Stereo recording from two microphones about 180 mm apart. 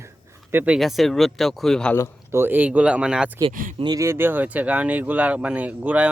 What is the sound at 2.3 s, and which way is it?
Speech, 10° right (ahead or behind).